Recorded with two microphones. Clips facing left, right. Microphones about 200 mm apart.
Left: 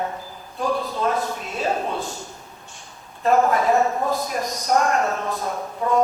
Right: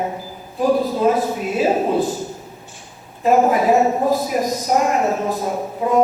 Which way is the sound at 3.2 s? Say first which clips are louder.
Right 3 dB; 10° right (ahead or behind).